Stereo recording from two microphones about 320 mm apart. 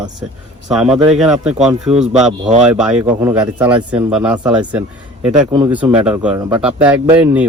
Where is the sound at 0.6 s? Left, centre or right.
Centre.